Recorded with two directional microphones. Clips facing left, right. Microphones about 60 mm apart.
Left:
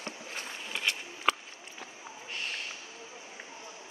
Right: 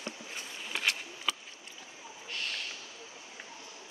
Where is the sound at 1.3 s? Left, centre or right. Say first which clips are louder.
Left 7 dB; left.